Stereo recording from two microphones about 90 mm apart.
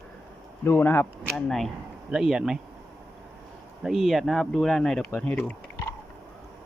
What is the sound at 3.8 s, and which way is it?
Speech, 5° right (ahead or behind).